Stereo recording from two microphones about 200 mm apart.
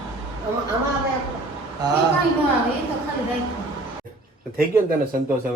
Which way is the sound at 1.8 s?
20° right (ahead or behind).